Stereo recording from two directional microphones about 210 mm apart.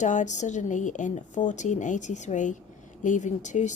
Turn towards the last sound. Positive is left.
turn(degrees=35)  # may be behind; listen again after turning